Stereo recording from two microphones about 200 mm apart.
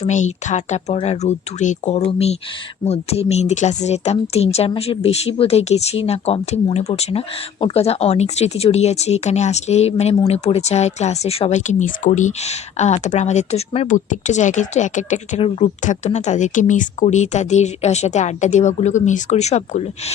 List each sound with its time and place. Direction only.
0.0 s speech: 35° left (ahead or behind)